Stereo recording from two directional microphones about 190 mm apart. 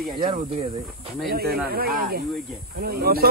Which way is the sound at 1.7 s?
55° right (ahead or behind).